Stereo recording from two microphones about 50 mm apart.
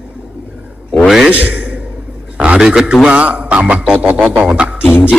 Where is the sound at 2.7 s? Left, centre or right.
Centre.